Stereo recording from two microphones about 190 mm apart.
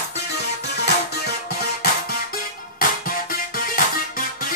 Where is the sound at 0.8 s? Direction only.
60° left (ahead or behind).